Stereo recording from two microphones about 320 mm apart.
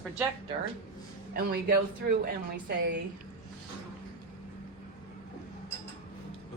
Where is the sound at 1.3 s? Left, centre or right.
Right.